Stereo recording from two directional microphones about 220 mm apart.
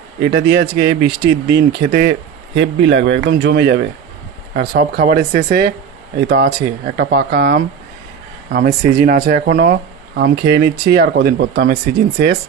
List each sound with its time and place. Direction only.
0.3 s speech: 50° right (ahead or behind)
2.6 s speech: 55° right (ahead or behind)